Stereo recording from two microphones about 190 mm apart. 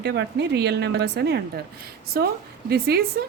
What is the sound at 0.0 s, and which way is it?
A woman's voice, 60° right (ahead or behind).